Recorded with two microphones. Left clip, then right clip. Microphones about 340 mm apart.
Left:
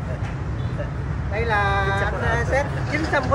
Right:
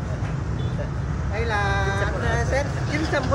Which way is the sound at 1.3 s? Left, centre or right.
Centre.